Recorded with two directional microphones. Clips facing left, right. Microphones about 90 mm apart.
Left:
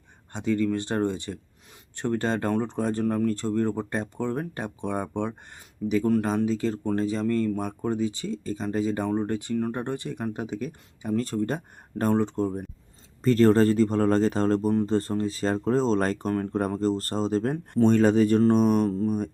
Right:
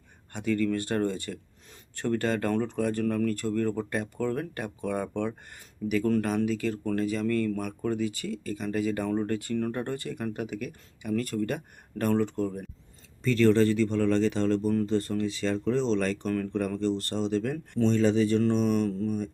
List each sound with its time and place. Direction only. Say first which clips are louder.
0.3 s speech: left 2 dB; 20° left (ahead or behind)
6.2 s speech: left 2 dB; 25° left (ahead or behind)
13.2 s speech: left 3 dB; 40° left (ahead or behind)